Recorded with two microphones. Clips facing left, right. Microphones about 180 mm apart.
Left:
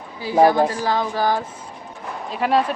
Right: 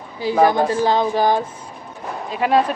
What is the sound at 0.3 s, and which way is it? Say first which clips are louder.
Speech: left 1 dB; 25° left (ahead or behind).